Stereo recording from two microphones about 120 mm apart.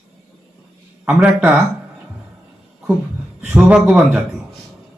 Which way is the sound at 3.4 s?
10° right (ahead or behind).